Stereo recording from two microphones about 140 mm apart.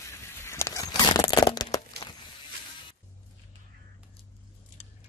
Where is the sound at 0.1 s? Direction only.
20° left (ahead or behind).